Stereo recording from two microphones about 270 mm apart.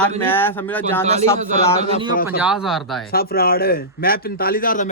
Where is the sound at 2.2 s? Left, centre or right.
Centre.